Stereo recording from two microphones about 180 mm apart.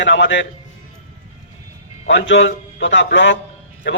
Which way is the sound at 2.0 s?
90° left.